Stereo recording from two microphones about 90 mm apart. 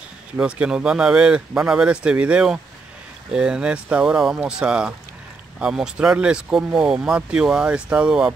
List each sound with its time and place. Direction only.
0.4 s speech: 10° right (ahead or behind)